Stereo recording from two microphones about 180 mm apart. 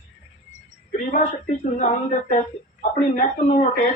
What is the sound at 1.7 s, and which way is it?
Speech, 45° left (ahead or behind).